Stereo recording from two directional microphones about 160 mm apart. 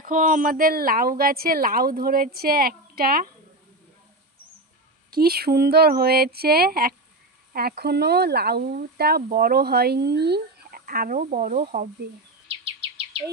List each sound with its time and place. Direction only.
0.0 s speech: 55° right (ahead or behind)
5.1 s speech: 75° right (ahead or behind); by 11.9 s 55° right (ahead or behind)